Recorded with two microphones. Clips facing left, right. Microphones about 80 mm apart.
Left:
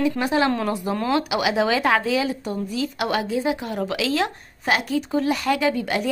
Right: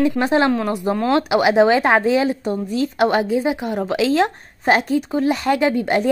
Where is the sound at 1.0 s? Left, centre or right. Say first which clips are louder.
Right 6 dB; right.